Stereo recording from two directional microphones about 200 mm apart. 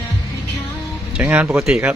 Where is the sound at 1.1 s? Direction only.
5° right (ahead or behind).